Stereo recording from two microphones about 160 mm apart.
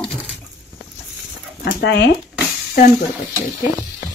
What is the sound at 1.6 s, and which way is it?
Speech, 90° left.